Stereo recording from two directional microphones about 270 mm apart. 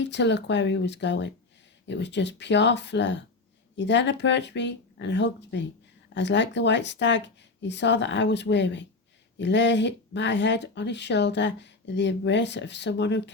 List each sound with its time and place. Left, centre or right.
0.0 s speech: left